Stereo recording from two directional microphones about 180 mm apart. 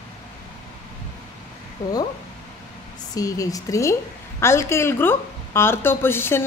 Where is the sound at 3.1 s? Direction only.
20° left (ahead or behind).